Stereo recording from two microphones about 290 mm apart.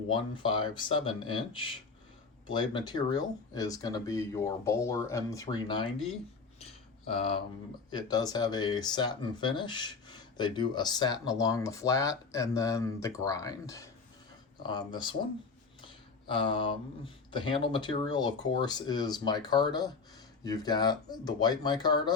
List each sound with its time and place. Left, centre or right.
0.1 s speech: centre
7.1 s speech: centre
16.3 s speech: centre